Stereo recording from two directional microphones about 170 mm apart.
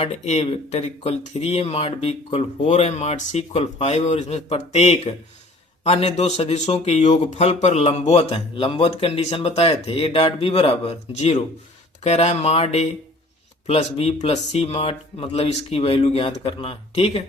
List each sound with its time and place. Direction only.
0.0 s speech: 35° left (ahead or behind)